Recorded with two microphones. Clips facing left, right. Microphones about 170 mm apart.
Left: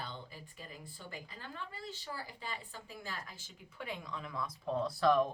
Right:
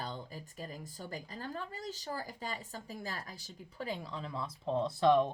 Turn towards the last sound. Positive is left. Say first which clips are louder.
# right 2 dB
turn(degrees=-25)  # may be behind; listen again after turning